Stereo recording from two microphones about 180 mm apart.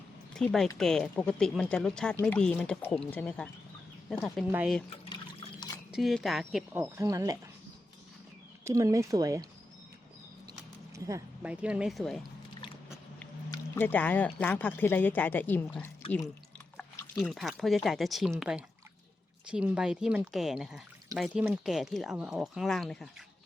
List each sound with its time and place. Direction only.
0.3 s speech: centre (ahead or behind)
4.5 s speech: 5° right (ahead or behind)
5.0 s water: 25° left (ahead or behind)
5.9 s speech: centre (ahead or behind); by 7.3 s 20° right (ahead or behind)
8.6 s speech: 20° right (ahead or behind)
10.9 s speech: 15° right (ahead or behind)
11.5 s speech: 5° right (ahead or behind)
13.5 s speech: 10° left (ahead or behind)